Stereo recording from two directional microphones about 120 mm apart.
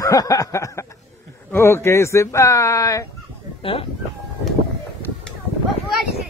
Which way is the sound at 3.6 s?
50° left (ahead or behind).